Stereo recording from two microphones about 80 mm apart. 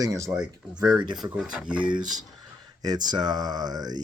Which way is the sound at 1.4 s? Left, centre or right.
Centre.